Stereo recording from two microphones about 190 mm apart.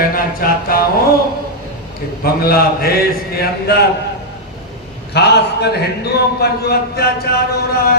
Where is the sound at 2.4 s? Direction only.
50° left (ahead or behind).